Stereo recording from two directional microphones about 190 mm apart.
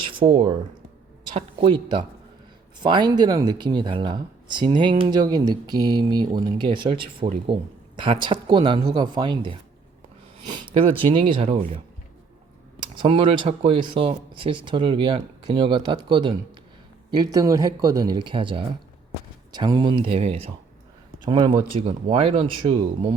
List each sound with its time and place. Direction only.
0.0 s a sound: 25° right (ahead or behind)
1.5 s speech: 25° right (ahead or behind)
12.8 s speech: 25° right (ahead or behind)